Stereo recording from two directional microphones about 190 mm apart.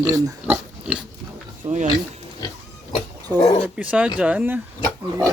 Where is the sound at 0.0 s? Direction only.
15° right (ahead or behind).